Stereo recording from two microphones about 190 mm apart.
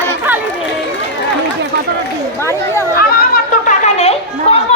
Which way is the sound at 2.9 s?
45° left (ahead or behind).